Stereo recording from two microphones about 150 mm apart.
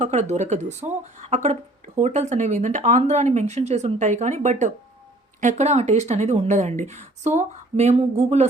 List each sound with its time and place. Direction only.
0.0 s speech: 50° right (ahead or behind)